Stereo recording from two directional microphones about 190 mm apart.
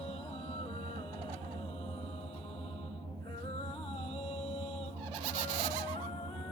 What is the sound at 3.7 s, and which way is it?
Music, 30° left (ahead or behind).